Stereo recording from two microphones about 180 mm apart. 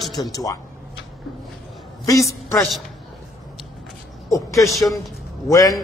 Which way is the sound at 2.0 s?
15° left (ahead or behind).